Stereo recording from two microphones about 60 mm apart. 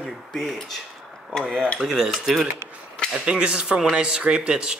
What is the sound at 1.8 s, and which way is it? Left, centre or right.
Speech, centre.